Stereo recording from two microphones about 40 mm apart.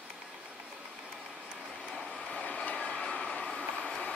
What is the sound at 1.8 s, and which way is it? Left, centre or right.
Vehicle, centre.